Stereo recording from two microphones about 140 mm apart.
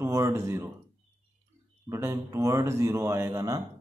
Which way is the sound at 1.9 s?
20° right (ahead or behind).